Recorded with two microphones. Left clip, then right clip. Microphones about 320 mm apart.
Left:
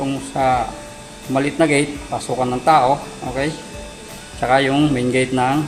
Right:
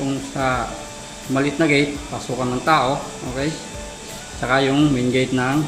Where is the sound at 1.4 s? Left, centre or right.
Left.